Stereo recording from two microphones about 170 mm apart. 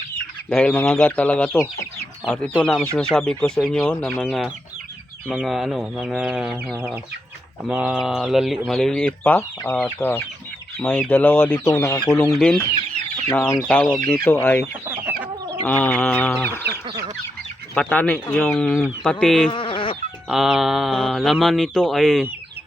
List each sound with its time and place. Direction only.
0.5 s chicken: 10° left (ahead or behind)
2.2 s speech: 5° left (ahead or behind)
9.7 s chicken: 10° left (ahead or behind)
10.8 s speech: 10° left (ahead or behind)
11.1 s chicken: 10° left (ahead or behind)
17.7 s speech: 10° left (ahead or behind)
19.5 s sheep: 30° left (ahead or behind)
20.2 s speech: 5° right (ahead or behind)